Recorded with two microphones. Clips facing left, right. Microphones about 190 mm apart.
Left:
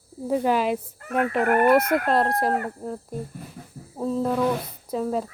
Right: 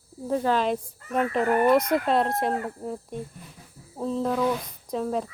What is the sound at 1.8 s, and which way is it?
Fowl, 60° left (ahead or behind).